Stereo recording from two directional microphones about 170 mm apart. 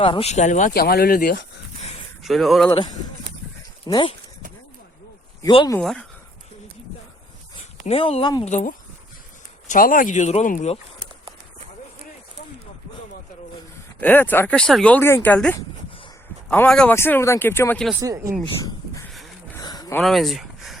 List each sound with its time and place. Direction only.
0.0 s speech: 35° left (ahead or behind)
0.7 s speech: 65° left (ahead or behind)
2.2 s speech: centre (ahead or behind)
2.6 s speech: 25° left (ahead or behind)
5.4 s speech: 25° left (ahead or behind)
5.8 s speech: centre (ahead or behind)
7.9 s speech: 35° left (ahead or behind)
8.4 s speech: 45° left (ahead or behind)
14.0 s speech: 10° left (ahead or behind)
18.0 s speech: 20° right (ahead or behind)
19.5 s a sound: 20° left (ahead or behind)
20.0 s speech: centre (ahead or behind)